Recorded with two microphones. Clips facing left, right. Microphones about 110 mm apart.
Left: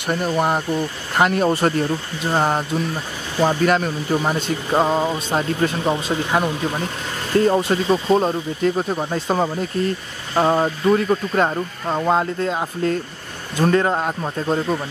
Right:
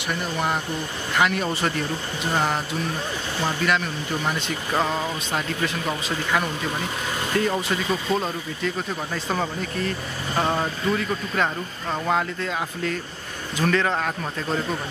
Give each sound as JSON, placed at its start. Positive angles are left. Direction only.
{"t": 0.1, "sound": "speech", "side_deg": 40}
{"t": 7.3, "sound": "a man's voice", "side_deg": 35}